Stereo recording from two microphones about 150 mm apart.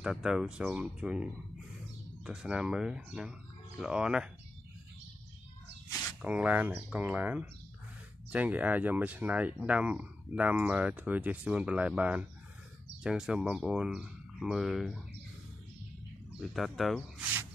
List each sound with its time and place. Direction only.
0.0 s speech: 5° right (ahead or behind)
6.2 s speech: 10° right (ahead or behind)
16.3 s speech: centre (ahead or behind)